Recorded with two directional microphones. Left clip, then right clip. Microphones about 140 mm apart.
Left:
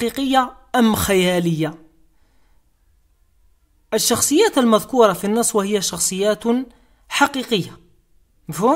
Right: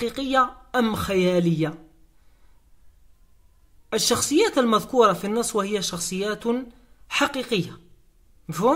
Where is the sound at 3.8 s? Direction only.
30° left (ahead or behind).